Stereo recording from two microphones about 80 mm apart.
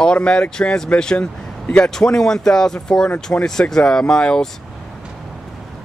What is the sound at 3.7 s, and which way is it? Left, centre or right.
Speech, centre.